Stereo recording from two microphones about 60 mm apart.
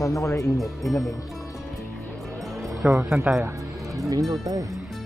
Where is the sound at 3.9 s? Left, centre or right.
Right.